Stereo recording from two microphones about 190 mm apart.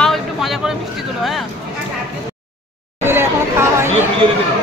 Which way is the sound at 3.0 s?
15° right (ahead or behind).